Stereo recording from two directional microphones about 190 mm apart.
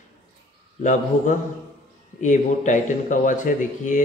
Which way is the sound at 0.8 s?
40° left (ahead or behind).